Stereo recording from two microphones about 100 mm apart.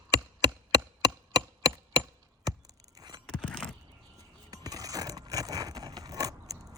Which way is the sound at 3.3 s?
10° left (ahead or behind).